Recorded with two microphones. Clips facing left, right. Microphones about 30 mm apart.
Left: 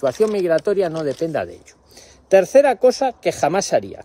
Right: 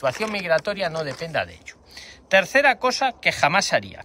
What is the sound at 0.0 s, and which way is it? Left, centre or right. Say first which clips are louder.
Speech: left 6 dB; right.